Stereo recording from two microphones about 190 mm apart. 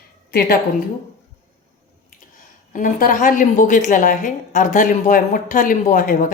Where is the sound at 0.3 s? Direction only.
55° left (ahead or behind).